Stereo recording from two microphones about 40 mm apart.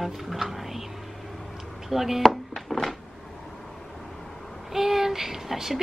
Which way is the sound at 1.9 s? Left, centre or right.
Centre.